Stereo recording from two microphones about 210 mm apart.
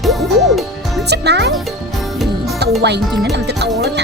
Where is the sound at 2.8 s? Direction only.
55° right (ahead or behind).